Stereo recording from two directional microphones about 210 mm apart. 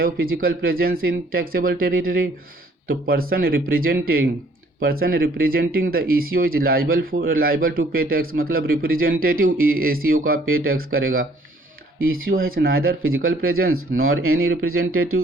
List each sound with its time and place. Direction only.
0.0 s speech: 45° right (ahead or behind)
12.0 s speech: 45° right (ahead or behind)
13.0 s speech: 75° right (ahead or behind)